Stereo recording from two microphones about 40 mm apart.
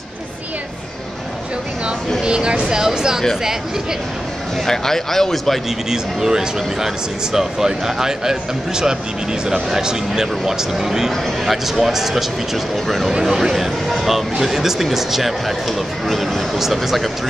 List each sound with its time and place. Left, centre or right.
2.2 s speech: right
4.6 s speech: centre
5.9 s speech: centre
13.2 s speech: centre